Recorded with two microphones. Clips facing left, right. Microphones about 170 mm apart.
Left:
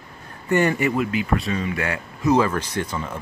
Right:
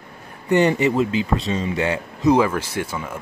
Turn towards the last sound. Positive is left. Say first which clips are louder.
# even
turn(degrees=-10)  # may be behind; listen again after turning